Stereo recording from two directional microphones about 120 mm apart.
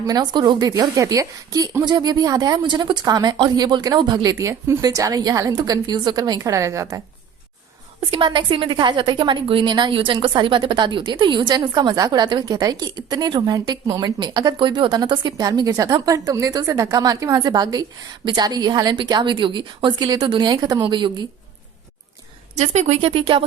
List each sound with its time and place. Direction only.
0.1 s a woman's voice: 35° right (ahead or behind)
8.1 s a woman's voice: 45° right (ahead or behind)
22.5 s speech: 70° right (ahead or behind); by 23.4 s 50° right (ahead or behind)